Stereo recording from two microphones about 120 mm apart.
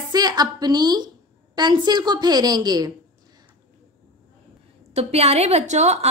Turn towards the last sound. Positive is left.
turn(degrees=-65)  # may be behind; listen again after turning